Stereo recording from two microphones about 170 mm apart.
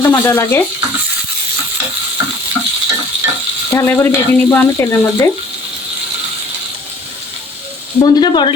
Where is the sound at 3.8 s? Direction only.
10° left (ahead or behind).